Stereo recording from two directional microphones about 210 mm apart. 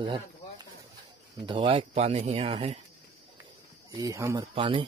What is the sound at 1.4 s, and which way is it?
Speech, 25° right (ahead or behind).